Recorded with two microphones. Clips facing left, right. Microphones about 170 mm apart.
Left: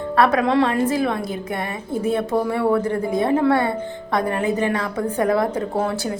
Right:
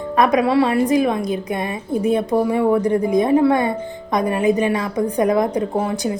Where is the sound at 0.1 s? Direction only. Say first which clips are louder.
Right 2 dB; 15° right (ahead or behind).